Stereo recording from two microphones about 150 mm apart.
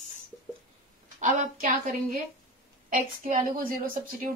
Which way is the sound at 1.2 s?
60° right (ahead or behind).